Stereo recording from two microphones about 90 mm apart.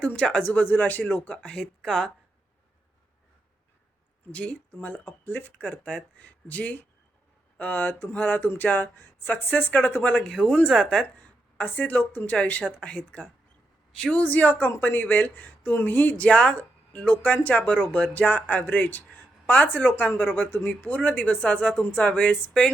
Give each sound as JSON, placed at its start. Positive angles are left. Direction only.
{"t": 0.0, "sound": "speech", "side_deg": 15}
{"t": 4.3, "sound": "speech", "side_deg": 15}
{"t": 11.2, "sound": "speech", "side_deg": 20}